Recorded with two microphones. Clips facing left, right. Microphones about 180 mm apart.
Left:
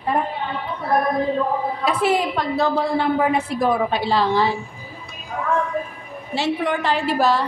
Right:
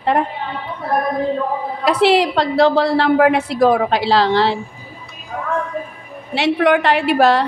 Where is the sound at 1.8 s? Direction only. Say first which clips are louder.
Right 7 dB; 85° right.